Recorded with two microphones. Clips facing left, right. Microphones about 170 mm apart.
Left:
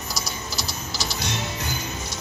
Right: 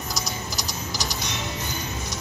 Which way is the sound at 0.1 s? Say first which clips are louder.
Even; 15° right (ahead or behind).